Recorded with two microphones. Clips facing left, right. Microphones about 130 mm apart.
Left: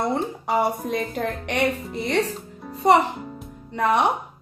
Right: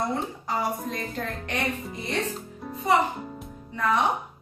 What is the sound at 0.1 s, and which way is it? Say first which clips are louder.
A woman's voice: left 5 dB; 65° left (ahead or behind).